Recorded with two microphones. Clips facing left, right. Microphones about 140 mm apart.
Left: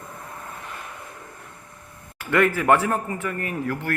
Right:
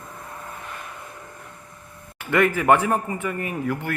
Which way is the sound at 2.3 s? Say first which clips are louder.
Right 1 dB; 10° right (ahead or behind).